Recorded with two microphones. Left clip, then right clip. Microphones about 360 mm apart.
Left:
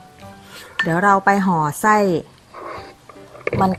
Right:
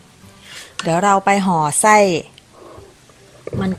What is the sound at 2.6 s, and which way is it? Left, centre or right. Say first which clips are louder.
Music: left 9 dB; left.